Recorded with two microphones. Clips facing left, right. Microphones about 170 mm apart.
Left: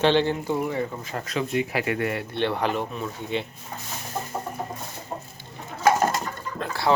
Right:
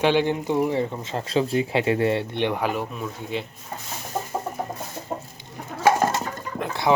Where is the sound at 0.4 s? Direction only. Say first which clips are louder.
Right 3 dB; 20° right (ahead or behind).